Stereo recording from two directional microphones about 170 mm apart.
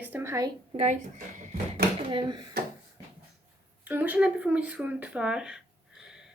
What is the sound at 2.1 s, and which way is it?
Speech, 25° right (ahead or behind).